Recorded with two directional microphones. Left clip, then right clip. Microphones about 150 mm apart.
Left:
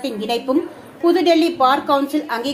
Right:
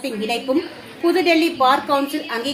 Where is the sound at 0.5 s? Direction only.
20° left (ahead or behind).